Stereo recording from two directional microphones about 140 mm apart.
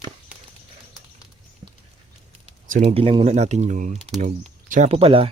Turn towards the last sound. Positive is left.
turn(degrees=-45)  # may be behind; listen again after turning